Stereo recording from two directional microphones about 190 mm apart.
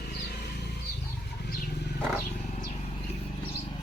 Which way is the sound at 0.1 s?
60° left (ahead or behind).